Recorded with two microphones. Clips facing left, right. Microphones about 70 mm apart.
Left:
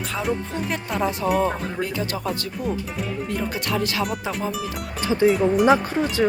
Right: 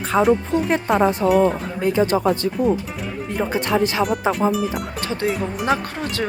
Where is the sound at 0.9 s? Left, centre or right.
Right.